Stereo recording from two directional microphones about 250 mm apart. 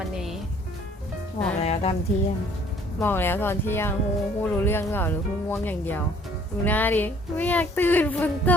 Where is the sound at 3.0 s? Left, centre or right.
Centre.